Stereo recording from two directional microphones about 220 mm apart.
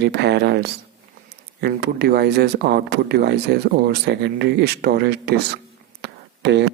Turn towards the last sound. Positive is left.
turn(degrees=-50)  # may be behind; listen again after turning